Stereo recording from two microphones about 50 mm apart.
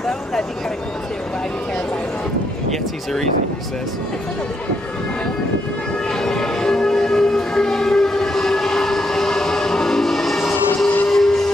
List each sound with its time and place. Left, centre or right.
0.0 s vehicle: centre
6.0 s train: centre